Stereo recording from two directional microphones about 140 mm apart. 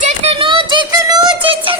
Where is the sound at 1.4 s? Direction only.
40° right (ahead or behind).